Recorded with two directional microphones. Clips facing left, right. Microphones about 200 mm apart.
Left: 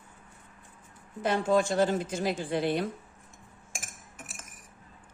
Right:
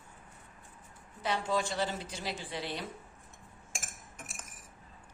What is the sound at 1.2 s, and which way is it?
Speech, 50° left (ahead or behind).